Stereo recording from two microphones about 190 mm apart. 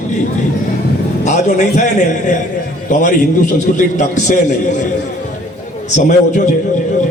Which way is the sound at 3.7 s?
40° left (ahead or behind).